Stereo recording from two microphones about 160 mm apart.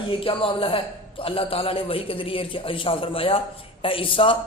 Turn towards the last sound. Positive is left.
turn(degrees=35)  # may be behind; listen again after turning